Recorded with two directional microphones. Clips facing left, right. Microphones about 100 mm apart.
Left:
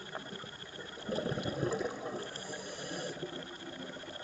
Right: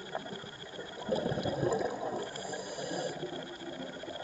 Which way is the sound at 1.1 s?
20° right (ahead or behind).